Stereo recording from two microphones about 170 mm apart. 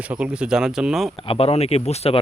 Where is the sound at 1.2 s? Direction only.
35° left (ahead or behind).